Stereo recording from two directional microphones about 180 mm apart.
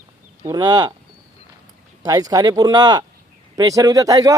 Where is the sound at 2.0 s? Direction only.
20° right (ahead or behind).